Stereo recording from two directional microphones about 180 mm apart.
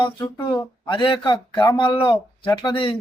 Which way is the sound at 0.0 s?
20° left (ahead or behind).